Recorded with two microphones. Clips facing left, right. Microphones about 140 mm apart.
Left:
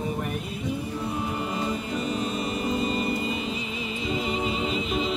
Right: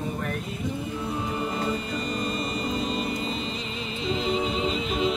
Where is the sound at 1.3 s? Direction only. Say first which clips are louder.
Right 1 dB; 5° left (ahead or behind).